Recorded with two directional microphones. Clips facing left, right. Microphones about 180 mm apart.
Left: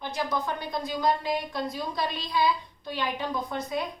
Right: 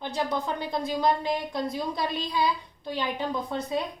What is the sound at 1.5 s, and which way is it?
Speech, 15° right (ahead or behind).